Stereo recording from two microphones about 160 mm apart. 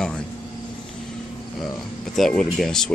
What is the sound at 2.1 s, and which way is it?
Speech, centre (ahead or behind).